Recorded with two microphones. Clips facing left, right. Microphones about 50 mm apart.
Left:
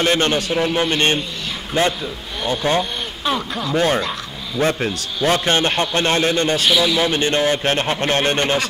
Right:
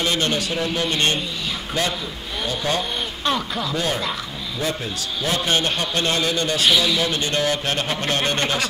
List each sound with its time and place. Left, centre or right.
0.0 s a man's voice: left
3.3 s speech: centre
3.7 s a man's voice: left
6.7 s a man's voice: centre
7.0 s a man's voice: left